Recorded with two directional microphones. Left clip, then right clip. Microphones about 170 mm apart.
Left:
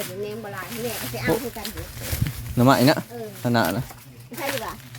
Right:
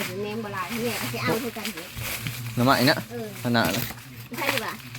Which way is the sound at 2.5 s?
55° left (ahead or behind).